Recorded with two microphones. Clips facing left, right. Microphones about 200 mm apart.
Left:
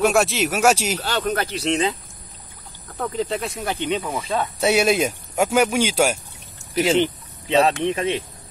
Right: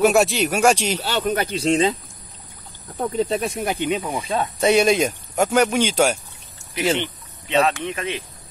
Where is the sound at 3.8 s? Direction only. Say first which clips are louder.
Right 1 dB; 10° right (ahead or behind).